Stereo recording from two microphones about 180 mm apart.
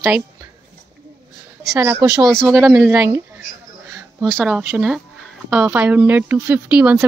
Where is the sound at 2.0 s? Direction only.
20° right (ahead or behind).